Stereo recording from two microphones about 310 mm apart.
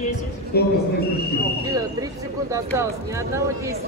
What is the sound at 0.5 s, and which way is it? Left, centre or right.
Speech, left.